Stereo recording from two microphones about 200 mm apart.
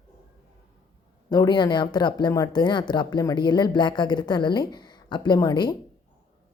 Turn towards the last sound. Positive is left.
turn(degrees=20)  # may be behind; listen again after turning